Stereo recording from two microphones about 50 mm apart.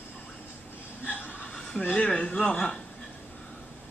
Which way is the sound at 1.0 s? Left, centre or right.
Left.